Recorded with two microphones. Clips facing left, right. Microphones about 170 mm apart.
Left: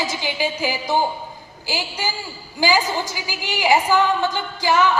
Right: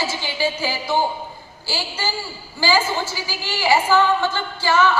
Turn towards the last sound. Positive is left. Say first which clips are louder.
# even
turn(degrees=15)  # may be behind; listen again after turning